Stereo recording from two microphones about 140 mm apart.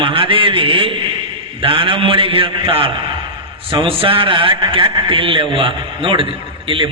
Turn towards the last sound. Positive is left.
turn(degrees=-40)  # may be behind; listen again after turning